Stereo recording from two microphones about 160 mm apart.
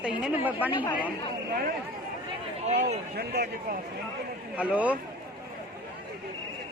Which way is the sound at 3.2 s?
75° right (ahead or behind).